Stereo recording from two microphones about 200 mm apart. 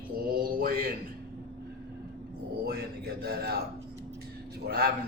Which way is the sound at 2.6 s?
55° right (ahead or behind).